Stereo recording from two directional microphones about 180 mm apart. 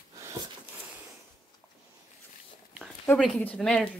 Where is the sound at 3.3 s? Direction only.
5° left (ahead or behind).